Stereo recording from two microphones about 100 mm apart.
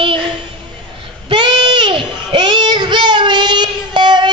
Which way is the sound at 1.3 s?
50° right (ahead or behind).